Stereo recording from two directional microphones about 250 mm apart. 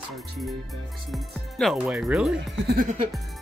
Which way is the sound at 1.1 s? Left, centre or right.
Centre.